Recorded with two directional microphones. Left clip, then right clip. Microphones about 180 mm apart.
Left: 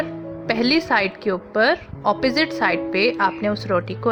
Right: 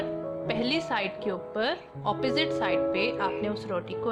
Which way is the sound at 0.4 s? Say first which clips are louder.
Left 10 dB; 35° left (ahead or behind).